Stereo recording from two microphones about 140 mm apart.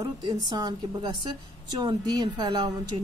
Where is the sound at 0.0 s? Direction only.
30° right (ahead or behind).